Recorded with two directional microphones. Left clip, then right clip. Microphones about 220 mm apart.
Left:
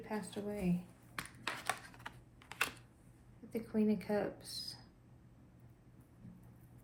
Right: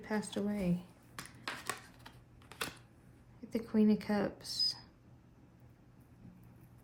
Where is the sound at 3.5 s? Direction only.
30° right (ahead or behind).